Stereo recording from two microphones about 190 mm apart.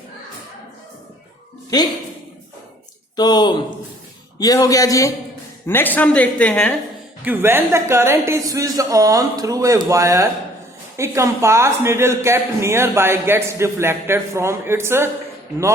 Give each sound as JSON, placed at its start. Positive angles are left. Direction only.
{"t": 3.2, "sound": "a woman's voice", "side_deg": 20}
{"t": 7.3, "sound": "a man's voice", "side_deg": -10}